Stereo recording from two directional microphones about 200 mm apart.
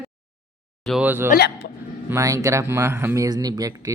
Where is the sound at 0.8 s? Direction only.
5° right (ahead or behind).